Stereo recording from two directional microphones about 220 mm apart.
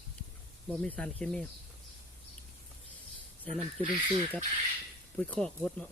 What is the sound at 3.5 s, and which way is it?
Speech, 25° right (ahead or behind).